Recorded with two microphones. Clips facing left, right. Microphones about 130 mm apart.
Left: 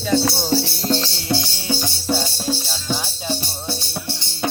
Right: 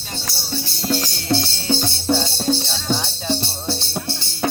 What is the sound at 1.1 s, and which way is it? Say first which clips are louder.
Music: right 2 dB; 20° left (ahead or behind).